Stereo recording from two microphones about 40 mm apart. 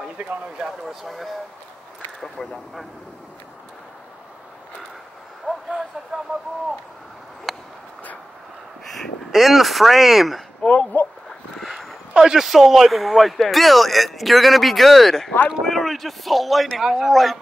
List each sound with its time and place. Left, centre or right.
0.6 s speech: centre
5.5 s a sound: right
7.5 s a sound: centre
9.3 s speech: centre
10.6 s speech: left
12.1 s speech: centre